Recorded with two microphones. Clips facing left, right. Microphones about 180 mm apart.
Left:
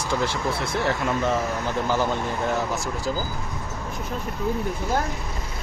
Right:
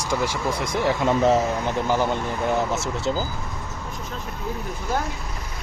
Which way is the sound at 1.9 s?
15° right (ahead or behind).